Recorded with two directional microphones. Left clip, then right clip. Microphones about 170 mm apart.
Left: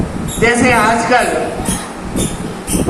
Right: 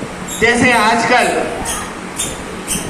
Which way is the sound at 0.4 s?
60° left (ahead or behind).